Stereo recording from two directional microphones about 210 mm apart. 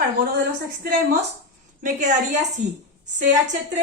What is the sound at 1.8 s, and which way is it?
Speech, 35° right (ahead or behind).